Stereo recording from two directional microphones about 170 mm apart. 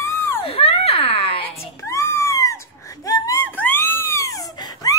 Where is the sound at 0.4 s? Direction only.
35° left (ahead or behind).